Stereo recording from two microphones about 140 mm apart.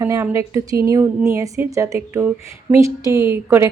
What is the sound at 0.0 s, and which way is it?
A woman's voice, 20° right (ahead or behind).